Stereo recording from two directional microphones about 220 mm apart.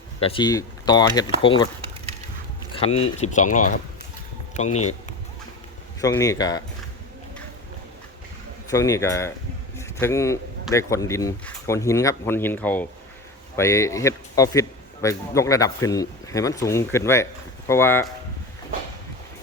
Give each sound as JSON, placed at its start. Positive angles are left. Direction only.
{"t": 0.2, "sound": "speech", "side_deg": 25}
{"t": 2.7, "sound": "speech", "side_deg": 25}
{"t": 6.0, "sound": "a man's voice", "side_deg": 15}
{"t": 8.7, "sound": "a man's voice", "side_deg": 15}